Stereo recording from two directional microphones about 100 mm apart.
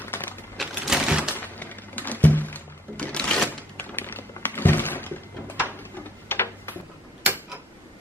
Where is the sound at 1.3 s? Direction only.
20° left (ahead or behind).